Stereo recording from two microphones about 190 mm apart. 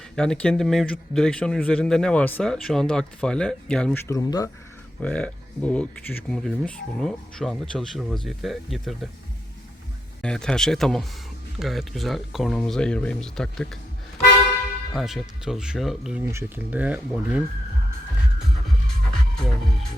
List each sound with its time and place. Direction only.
0.2 s a man's voice: 5° left (ahead or behind)
4.1 s speech: 20° left (ahead or behind)
4.9 s a man's voice: 5° left (ahead or behind)
10.2 s a man's voice: 5° left (ahead or behind)
14.9 s a man's voice: centre (ahead or behind)
16.2 s speech: 15° right (ahead or behind)
19.4 s a man's voice: centre (ahead or behind)